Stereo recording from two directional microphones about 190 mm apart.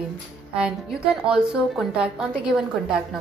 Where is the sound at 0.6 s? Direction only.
5° right (ahead or behind).